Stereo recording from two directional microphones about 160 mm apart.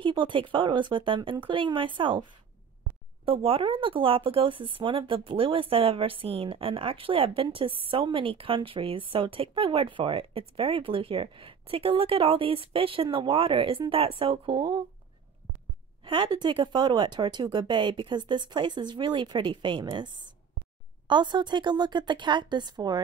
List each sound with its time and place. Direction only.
0.0 s speech: 30° right (ahead or behind)
3.3 s speech: 35° right (ahead or behind)
16.0 s speech: 30° right (ahead or behind)